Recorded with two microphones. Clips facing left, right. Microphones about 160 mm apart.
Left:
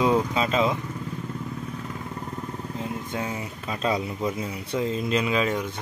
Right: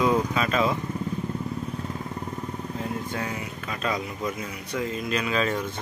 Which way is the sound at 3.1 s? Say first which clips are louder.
Left 1 dB; 20° left (ahead or behind).